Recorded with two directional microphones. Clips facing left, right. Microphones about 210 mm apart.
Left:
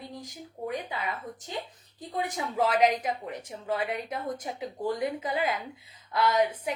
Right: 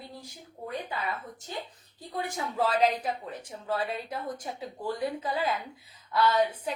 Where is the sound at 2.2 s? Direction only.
20° left (ahead or behind).